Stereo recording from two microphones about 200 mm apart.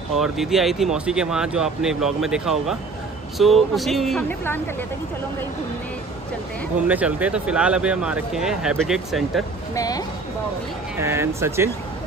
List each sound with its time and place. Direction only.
0.2 s speech: centre (ahead or behind)
6.9 s speech: 5° right (ahead or behind)
9.8 s a woman's voice: 20° left (ahead or behind)
11.0 s speech: 15° right (ahead or behind)